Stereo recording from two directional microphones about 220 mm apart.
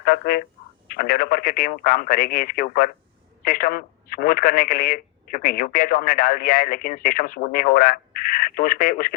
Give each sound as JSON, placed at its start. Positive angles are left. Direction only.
{"t": 0.1, "sound": "speech", "side_deg": 50}